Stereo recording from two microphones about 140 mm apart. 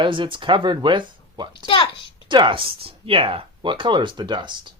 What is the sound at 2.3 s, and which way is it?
Speech, 35° right (ahead or behind).